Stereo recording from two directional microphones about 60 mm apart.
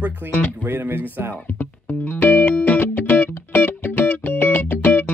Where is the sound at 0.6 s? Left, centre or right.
Right.